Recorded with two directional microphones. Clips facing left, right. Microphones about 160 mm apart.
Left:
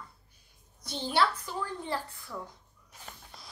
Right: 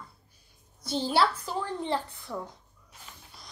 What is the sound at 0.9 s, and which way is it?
A woman's voice, 30° right (ahead or behind).